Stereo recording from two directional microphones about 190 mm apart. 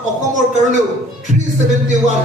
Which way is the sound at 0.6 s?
40° right (ahead or behind).